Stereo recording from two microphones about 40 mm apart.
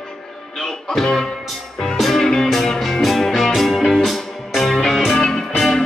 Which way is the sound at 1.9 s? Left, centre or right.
Centre.